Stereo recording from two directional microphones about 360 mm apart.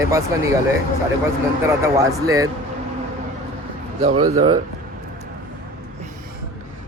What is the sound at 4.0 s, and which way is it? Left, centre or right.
Speech, centre.